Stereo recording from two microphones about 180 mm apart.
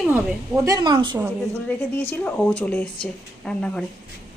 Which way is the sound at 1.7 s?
10° left (ahead or behind).